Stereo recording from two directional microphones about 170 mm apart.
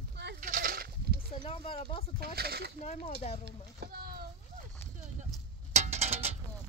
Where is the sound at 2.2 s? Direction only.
65° right (ahead or behind).